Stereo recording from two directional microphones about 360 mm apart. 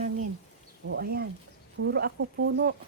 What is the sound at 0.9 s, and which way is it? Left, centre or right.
Speech, right.